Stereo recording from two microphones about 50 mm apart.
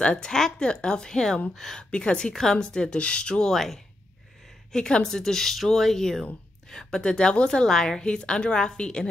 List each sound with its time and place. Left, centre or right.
0.0 s a woman's voice: centre
1.8 s a woman's voice: centre
3.5 s speech: centre
4.7 s a woman's voice: centre